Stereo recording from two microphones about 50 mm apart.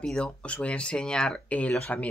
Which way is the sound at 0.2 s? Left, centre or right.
Left.